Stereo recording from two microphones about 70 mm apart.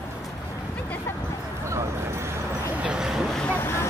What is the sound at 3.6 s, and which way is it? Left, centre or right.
Vehicle, left.